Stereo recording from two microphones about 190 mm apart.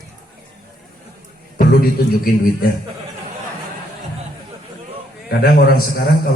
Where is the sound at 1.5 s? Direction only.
50° left (ahead or behind).